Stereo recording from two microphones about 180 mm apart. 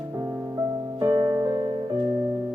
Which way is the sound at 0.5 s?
20° right (ahead or behind).